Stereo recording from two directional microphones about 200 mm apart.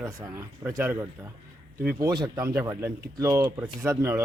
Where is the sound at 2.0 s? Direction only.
20° right (ahead or behind).